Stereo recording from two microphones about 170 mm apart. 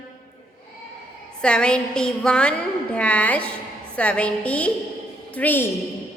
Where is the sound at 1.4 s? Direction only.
5° left (ahead or behind).